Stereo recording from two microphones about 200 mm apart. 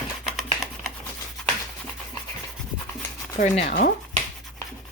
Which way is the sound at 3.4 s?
40° left (ahead or behind).